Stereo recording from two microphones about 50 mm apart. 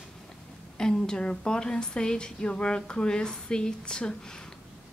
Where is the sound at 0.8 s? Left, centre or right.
Centre.